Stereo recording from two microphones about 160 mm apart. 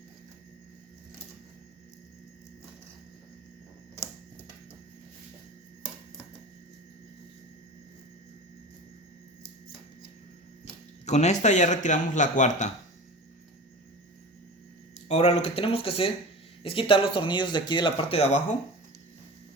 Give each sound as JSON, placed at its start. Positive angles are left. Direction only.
{"t": 11.0, "sound": "a man's voice", "side_deg": 45}
{"t": 15.0, "sound": "speech", "side_deg": 40}